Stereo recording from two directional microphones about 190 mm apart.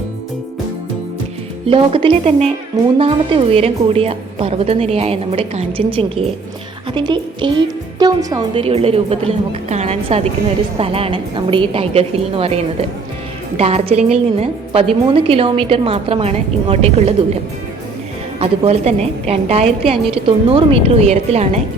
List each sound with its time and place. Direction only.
1.6 s a woman's voice: 30° right (ahead or behind)
18.3 s a woman's voice: 30° right (ahead or behind)